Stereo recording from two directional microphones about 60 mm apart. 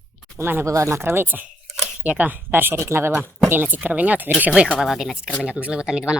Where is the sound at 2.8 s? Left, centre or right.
Right.